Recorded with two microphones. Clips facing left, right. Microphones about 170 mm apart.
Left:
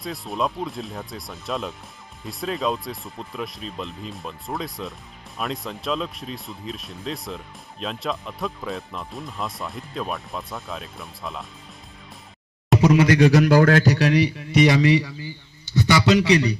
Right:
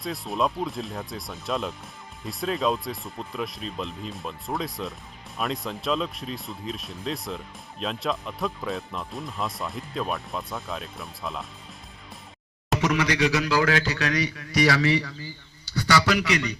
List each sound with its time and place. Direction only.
0.0 s speech: centre (ahead or behind)
12.8 s a man's voice: 35° left (ahead or behind)
13.1 s a man's voice: 50° left (ahead or behind); by 16.6 s 35° left (ahead or behind)